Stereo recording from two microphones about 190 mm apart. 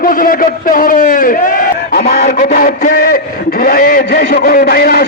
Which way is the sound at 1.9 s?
55° left (ahead or behind).